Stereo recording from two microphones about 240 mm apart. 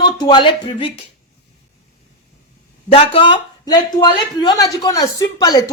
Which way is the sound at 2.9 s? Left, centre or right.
Left.